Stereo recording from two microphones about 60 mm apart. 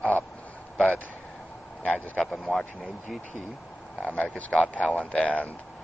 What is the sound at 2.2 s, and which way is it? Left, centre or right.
Speech, centre.